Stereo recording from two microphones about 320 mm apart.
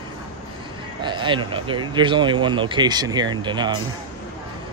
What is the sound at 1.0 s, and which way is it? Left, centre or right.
Speech, centre.